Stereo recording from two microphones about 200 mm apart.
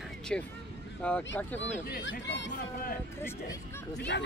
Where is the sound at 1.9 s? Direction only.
55° left (ahead or behind).